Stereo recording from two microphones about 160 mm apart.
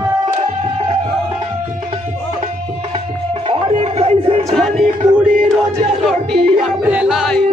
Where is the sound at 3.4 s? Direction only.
35° right (ahead or behind).